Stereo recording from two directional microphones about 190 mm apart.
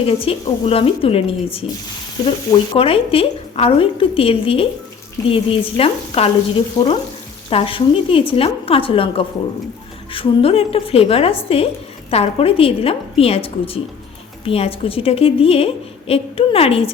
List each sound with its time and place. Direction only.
0.0 s a woman's voice: 30° left (ahead or behind)
7.5 s a woman's voice: 30° left (ahead or behind)